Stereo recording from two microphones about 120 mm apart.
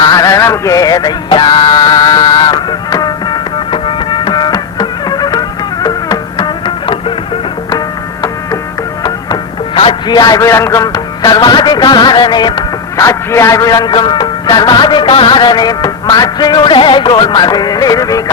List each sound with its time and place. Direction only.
0.0 s music: 30° left (ahead or behind)
9.0 s music: 35° left (ahead or behind)
9.8 s a man's voice: 35° left (ahead or behind)